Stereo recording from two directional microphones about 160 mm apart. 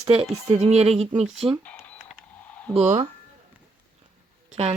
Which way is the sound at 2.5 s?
10° left (ahead or behind).